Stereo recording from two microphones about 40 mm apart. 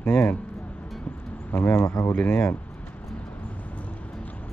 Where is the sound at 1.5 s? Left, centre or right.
Left.